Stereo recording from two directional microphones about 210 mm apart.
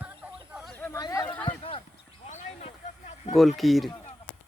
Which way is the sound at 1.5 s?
25° left (ahead or behind).